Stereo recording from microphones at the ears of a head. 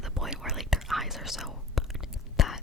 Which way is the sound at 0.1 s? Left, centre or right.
Centre.